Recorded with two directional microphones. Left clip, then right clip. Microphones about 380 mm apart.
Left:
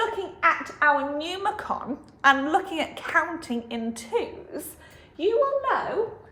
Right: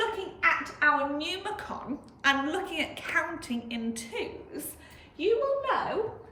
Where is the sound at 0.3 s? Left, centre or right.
Centre.